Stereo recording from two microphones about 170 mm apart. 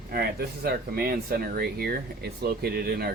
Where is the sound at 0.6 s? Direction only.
60° right (ahead or behind).